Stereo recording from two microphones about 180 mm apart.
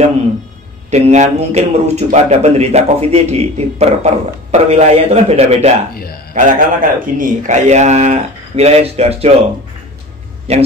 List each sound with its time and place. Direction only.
0.8 s a man's voice: 40° right (ahead or behind)
6.3 s a man's voice: 50° right (ahead or behind)
10.5 s a man's voice: 35° right (ahead or behind)